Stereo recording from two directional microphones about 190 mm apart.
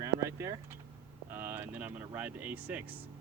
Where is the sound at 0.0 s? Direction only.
15° right (ahead or behind).